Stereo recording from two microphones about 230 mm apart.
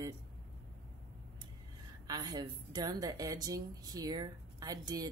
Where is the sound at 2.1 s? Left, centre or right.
Centre.